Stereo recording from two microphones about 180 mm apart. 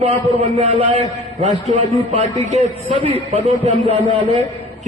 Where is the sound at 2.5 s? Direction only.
40° right (ahead or behind).